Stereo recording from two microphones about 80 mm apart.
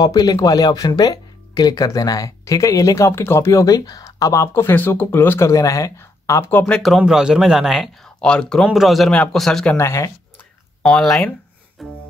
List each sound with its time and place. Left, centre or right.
0.0 s speech: left
4.6 s speech: left
5.5 s speech: left
5.9 s a sound: left
6.6 s a man's voice: centre
7.1 s speech: centre
8.2 s speech: centre
8.6 s a man's voice: centre
9.1 s a man's voice: centre
9.8 s speech: left
10.8 s speech: centre
11.8 s music: centre